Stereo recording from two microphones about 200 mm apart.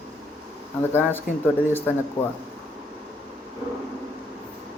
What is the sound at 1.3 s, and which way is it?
Speech, 45° left (ahead or behind).